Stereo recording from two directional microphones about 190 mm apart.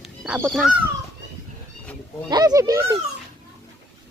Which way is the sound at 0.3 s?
5° right (ahead or behind).